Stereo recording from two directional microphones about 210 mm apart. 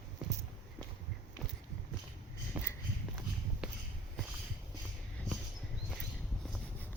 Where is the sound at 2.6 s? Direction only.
5° right (ahead or behind).